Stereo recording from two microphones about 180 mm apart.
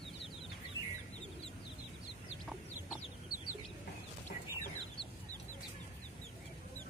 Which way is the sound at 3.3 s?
55° left (ahead or behind).